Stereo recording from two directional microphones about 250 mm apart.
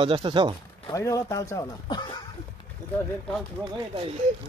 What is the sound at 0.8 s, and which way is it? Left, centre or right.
A man's voice, centre.